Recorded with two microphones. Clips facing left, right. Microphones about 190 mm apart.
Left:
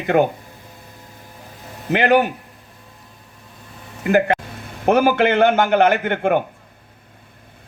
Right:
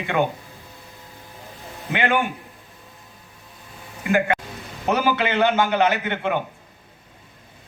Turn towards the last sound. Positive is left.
turn(degrees=50)  # may be behind; listen again after turning